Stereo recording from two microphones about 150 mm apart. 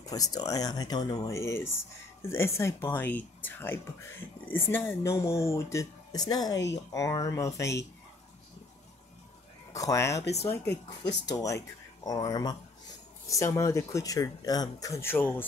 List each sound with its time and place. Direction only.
0.0 s speech: 25° left (ahead or behind)
9.7 s speech: 20° left (ahead or behind)